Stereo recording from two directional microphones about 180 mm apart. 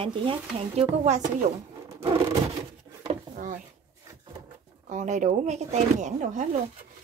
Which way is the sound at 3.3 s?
45° right (ahead or behind).